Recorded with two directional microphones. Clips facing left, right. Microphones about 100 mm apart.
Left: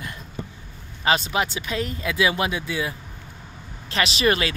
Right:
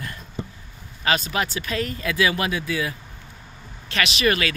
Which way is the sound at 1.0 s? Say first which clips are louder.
Left 1 dB; 25° left (ahead or behind).